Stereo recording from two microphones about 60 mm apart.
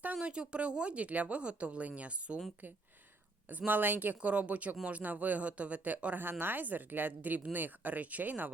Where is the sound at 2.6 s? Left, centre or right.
Right.